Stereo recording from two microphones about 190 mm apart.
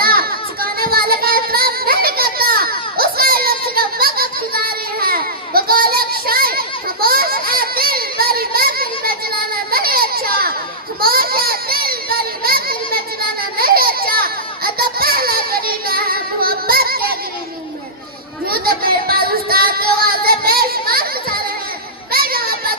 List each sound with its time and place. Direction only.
0.0 s child singing: 50° right (ahead or behind)
9.7 s baby cry: 50° right (ahead or behind)
11.0 s a sound: 50° right (ahead or behind)
13.6 s baby cry: 50° right (ahead or behind)
18.4 s child singing: 50° right (ahead or behind)
22.1 s a sound: 50° right (ahead or behind)